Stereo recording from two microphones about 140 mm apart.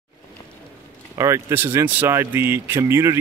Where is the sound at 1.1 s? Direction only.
20° right (ahead or behind).